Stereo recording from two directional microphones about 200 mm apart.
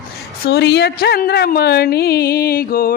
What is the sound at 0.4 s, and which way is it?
A woman's voice, 55° left (ahead or behind).